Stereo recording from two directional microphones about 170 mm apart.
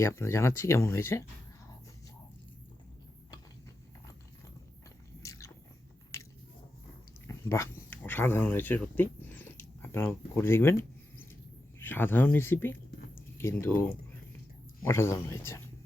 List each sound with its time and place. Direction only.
0.0 s speech: 15° left (ahead or behind)
5.2 s biting: 20° left (ahead or behind)
7.3 s speech: 15° left (ahead or behind)
11.8 s speech: 10° left (ahead or behind)
14.8 s speech: 15° left (ahead or behind)